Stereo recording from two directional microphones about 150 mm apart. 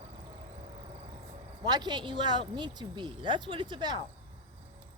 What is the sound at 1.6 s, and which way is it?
Speech, 30° right (ahead or behind).